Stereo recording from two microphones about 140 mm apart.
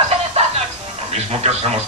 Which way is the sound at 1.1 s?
50° right (ahead or behind).